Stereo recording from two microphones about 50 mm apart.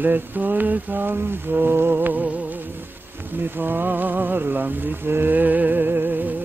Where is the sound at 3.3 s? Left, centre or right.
Right.